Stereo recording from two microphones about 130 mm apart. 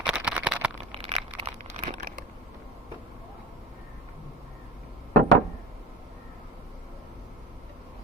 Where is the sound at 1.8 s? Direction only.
90° right.